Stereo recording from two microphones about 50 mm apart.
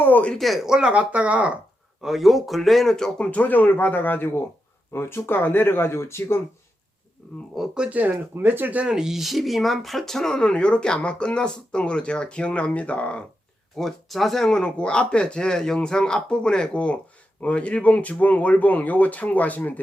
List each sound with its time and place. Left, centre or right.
0.0 s speech: left
0.3 s speech: centre
0.6 s speech: centre
2.0 s speech: centre
3.2 s speech: left
4.9 s speech: left
5.4 s speech: left
7.2 s speech: left
7.9 s speech: right
8.4 s speech: right
8.9 s speech: centre; by 13.2 s left
13.7 s speech: centre; by 19.8 s left